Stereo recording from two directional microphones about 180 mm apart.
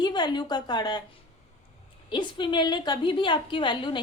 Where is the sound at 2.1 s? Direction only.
25° left (ahead or behind).